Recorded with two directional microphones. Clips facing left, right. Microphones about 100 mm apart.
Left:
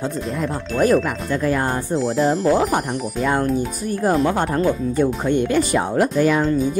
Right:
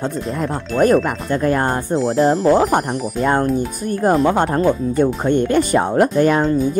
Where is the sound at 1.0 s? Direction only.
45° right (ahead or behind).